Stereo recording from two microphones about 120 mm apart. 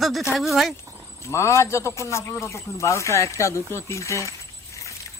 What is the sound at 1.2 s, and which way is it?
A man's voice, 25° left (ahead or behind).